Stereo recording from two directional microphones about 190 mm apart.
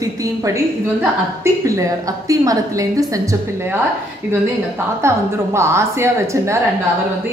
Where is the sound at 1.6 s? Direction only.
15° right (ahead or behind).